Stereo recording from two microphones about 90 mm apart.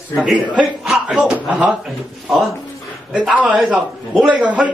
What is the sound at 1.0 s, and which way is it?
Speech, 10° right (ahead or behind).